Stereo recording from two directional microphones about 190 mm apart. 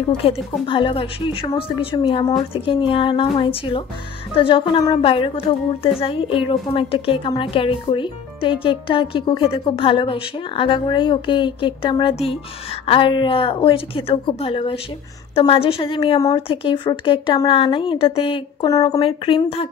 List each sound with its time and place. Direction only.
0.2 s a woman's voice: 30° left (ahead or behind)